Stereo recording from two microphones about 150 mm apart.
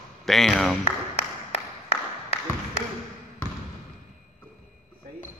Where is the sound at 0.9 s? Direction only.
45° left (ahead or behind).